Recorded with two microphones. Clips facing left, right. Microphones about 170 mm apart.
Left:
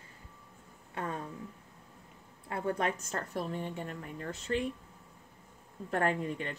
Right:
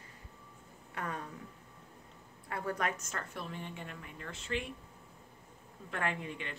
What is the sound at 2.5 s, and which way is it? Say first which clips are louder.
A woman's voice: left 3 dB; 30° left (ahead or behind).